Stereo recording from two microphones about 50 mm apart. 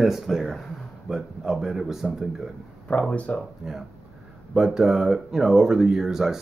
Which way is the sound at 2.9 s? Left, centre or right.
Left.